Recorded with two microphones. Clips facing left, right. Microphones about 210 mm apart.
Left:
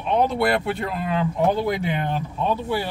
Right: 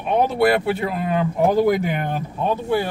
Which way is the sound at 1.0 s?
45° right (ahead or behind).